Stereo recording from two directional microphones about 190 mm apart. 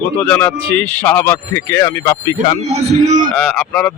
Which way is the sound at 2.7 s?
40° right (ahead or behind).